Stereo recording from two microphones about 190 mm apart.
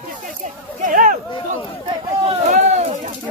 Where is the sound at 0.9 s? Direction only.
45° right (ahead or behind).